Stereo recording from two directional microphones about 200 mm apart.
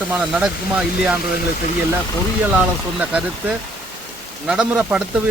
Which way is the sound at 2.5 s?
5° right (ahead or behind).